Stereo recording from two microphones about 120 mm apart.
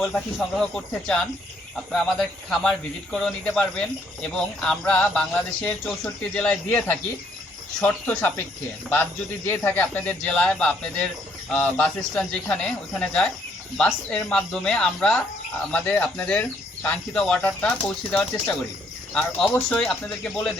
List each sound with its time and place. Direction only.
0.0 s speech: 5° left (ahead or behind)
9.5 s speech: 15° left (ahead or behind)